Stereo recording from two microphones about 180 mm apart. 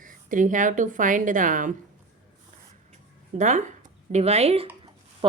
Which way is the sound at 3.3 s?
45° right (ahead or behind).